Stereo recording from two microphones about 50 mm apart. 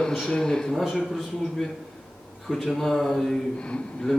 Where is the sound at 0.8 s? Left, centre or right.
Centre.